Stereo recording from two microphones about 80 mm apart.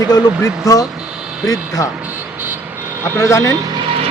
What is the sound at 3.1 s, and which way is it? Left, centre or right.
Speech, left.